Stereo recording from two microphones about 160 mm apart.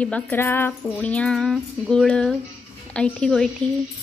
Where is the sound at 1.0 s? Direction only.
5° left (ahead or behind).